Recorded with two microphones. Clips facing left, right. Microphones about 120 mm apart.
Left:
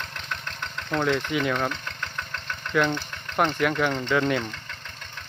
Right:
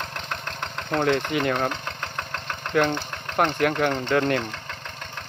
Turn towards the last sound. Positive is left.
turn(degrees=-55)  # may be behind; listen again after turning